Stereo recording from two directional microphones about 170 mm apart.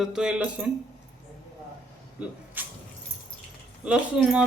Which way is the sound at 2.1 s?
10° right (ahead or behind).